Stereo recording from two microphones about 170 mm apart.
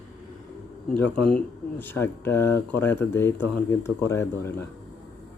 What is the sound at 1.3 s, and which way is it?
Speech, 10° left (ahead or behind).